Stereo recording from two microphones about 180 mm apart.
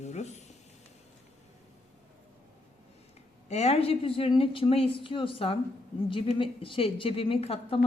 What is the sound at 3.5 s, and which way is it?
A woman's voice, 35° left (ahead or behind).